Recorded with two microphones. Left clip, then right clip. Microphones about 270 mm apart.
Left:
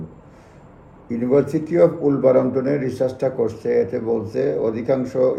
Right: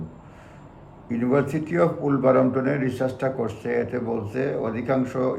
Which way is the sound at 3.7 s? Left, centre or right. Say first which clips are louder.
Left 6 dB; centre.